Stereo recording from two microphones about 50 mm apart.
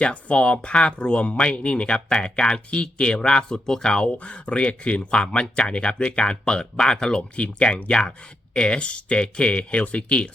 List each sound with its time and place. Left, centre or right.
0.0 s speech: left